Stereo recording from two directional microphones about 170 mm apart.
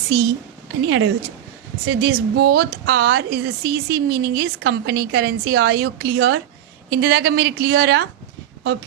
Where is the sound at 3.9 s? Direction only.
65° right (ahead or behind); by 8.0 s 85° right.